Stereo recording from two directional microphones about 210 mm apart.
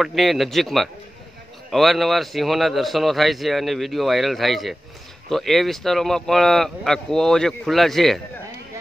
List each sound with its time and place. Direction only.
0.0 s a man's voice: centre (ahead or behind)